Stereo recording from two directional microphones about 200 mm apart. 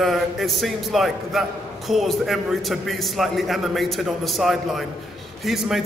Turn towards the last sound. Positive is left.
turn(degrees=0)  # may be behind; listen again after turning